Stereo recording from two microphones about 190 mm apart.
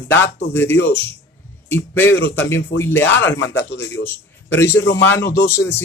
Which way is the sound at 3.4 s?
70° left (ahead or behind).